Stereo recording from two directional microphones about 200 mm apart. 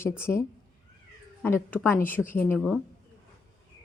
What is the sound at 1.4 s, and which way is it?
A woman's voice, 10° left (ahead or behind).